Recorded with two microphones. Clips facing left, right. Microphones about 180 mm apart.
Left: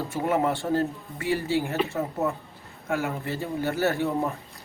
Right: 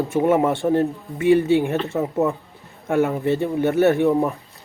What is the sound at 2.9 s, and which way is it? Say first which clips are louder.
Speech: right 11 dB; 25° right (ahead or behind).